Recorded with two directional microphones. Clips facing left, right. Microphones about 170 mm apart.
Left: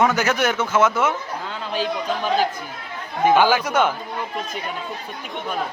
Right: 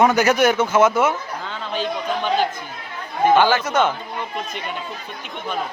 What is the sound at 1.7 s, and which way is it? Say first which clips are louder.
A man's voice: even; 5° left (ahead or behind).